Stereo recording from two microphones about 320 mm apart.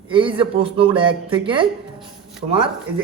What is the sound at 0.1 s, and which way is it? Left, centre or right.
A man's voice, centre.